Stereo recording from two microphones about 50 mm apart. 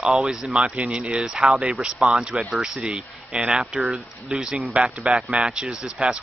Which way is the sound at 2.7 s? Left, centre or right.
Centre.